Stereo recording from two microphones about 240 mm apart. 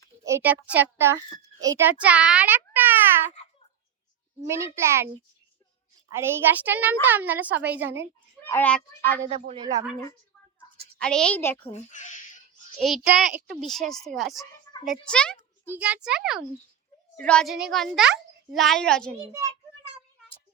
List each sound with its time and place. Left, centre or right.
0.3 s a woman's voice: centre
4.4 s a woman's voice: centre
6.1 s a woman's voice: centre
8.4 s speech: centre
9.6 s a woman's voice: right
11.0 s a child's voice: centre
11.7 s a child's voice: left
12.8 s a child's voice: centre
15.7 s a child's voice: centre